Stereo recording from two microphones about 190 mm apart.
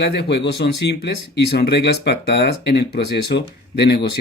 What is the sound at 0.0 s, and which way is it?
Speech, 60° left (ahead or behind).